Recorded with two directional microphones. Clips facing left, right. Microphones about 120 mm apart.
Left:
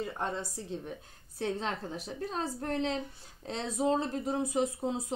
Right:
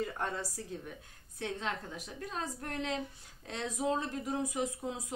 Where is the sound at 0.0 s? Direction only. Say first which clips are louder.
Left 1 dB; 25° left (ahead or behind).